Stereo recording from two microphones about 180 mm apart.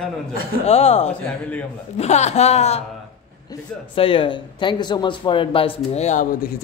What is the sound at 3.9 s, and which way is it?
Speech, 30° left (ahead or behind).